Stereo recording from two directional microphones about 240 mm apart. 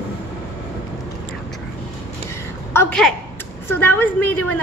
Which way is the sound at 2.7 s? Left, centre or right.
Centre.